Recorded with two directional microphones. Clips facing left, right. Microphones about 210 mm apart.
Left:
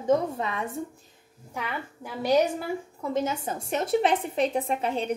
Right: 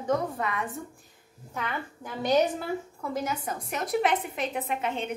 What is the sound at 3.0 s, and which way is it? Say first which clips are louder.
A woman's voice: left 4 dB; 25° left (ahead or behind).